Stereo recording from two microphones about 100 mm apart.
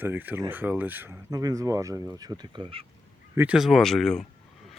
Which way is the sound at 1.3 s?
35° right (ahead or behind).